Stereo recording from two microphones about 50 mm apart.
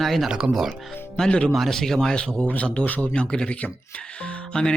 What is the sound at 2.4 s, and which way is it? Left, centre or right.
Speech, left.